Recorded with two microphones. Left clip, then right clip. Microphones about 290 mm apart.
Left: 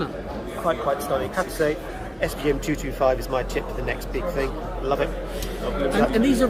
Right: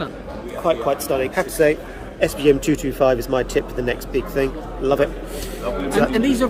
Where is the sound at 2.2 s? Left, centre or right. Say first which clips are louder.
Right 8 dB; right.